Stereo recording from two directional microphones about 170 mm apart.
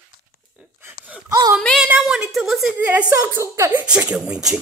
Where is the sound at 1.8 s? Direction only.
5° right (ahead or behind).